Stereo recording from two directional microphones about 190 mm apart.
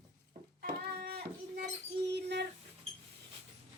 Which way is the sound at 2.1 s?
65° right (ahead or behind).